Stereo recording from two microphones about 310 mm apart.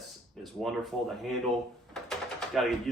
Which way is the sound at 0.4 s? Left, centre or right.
Centre.